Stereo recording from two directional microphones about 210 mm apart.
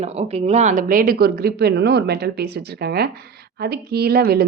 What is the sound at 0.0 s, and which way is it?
Speech, 30° right (ahead or behind).